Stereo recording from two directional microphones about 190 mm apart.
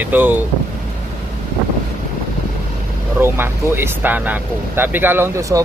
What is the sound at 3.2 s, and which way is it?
Speech, 10° right (ahead or behind).